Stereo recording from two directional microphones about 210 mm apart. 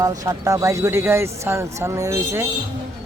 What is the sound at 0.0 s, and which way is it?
Speech, 15° right (ahead or behind).